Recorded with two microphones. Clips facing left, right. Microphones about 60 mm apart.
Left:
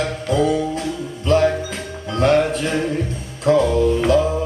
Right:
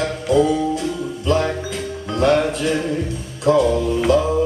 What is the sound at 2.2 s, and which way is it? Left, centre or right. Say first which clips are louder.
Music: left 1 dB; left.